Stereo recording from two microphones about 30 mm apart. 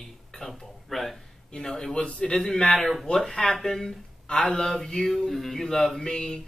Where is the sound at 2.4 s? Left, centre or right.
Left.